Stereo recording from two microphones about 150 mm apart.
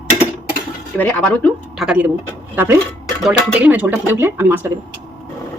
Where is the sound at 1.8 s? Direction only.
5° right (ahead or behind).